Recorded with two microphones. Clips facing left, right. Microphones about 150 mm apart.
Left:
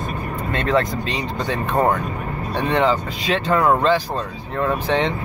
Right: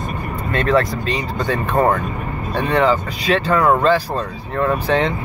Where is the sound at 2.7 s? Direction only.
20° left (ahead or behind).